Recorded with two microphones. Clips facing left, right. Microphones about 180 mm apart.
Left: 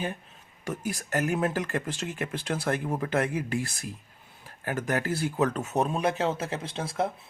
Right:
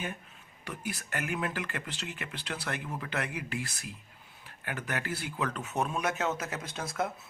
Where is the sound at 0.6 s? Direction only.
45° left (ahead or behind).